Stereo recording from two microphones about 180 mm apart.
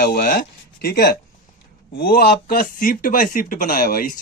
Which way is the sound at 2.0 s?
60° left (ahead or behind).